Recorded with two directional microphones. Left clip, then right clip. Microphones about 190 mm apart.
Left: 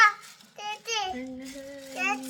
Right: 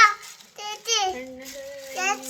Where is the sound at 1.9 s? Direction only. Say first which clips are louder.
Right 3 dB; 20° right (ahead or behind).